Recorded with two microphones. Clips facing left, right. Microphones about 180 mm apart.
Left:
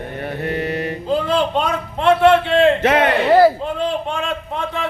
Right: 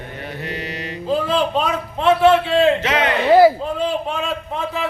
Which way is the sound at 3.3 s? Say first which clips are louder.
Right 3 dB; 5° right (ahead or behind).